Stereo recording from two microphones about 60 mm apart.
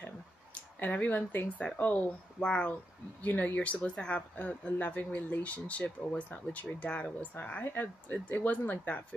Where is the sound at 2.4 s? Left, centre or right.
Centre.